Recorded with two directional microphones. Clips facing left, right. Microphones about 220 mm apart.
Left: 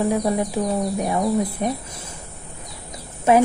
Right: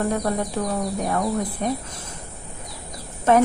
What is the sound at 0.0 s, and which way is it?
Speech, 5° left (ahead or behind).